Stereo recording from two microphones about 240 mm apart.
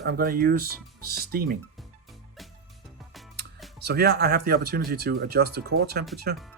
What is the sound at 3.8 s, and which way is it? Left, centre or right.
Speech, right.